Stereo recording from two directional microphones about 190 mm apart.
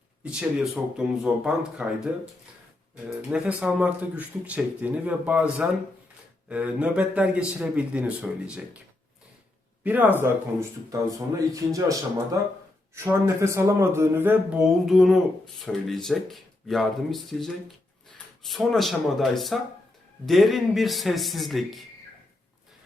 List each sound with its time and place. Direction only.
0.3 s speech: 5° right (ahead or behind)
3.1 s speech: 5° right (ahead or behind)
9.8 s speech: 10° right (ahead or behind)